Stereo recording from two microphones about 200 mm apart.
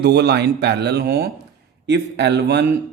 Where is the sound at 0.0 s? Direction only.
55° right (ahead or behind).